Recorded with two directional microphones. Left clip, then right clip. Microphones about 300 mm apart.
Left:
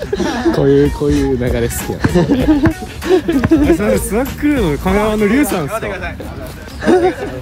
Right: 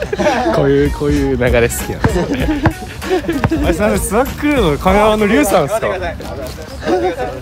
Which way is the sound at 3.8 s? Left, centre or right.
Centre.